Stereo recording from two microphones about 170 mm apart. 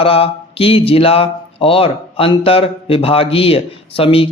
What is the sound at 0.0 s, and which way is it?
Speech, 35° left (ahead or behind).